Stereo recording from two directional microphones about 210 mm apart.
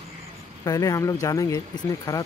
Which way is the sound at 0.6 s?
15° left (ahead or behind).